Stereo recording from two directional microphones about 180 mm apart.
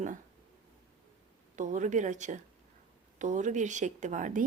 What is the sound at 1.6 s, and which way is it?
Speech, 45° right (ahead or behind).